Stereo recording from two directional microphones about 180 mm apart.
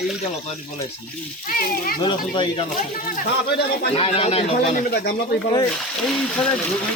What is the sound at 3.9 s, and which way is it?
Speech, 35° left (ahead or behind).